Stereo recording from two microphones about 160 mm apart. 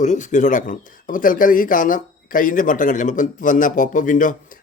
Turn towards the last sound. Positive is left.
turn(degrees=55)  # may be behind; listen again after turning